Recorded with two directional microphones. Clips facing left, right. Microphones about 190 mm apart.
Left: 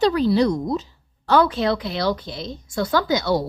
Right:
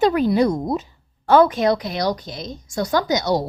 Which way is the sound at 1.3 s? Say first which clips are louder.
Right 3 dB; 20° right (ahead or behind).